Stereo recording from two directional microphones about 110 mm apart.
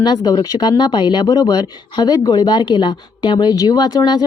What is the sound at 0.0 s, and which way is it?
A woman's voice, 40° left (ahead or behind).